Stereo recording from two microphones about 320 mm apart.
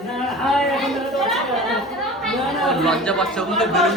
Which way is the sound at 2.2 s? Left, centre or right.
Centre.